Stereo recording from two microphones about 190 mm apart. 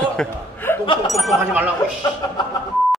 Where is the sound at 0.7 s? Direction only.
10° left (ahead or behind).